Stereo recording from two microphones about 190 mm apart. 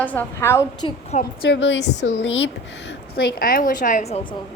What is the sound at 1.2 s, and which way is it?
A woman's voice, 60° left (ahead or behind).